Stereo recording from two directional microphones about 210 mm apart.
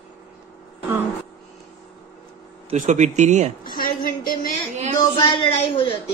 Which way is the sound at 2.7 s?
35° right (ahead or behind).